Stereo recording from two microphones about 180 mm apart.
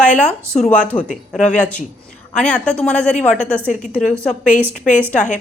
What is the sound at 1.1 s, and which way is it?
Speech, 40° left (ahead or behind).